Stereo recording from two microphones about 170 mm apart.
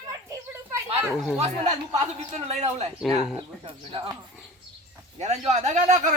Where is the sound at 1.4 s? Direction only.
40° right (ahead or behind).